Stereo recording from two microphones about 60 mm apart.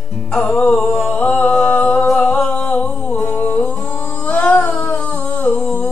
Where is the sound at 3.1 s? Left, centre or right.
Left.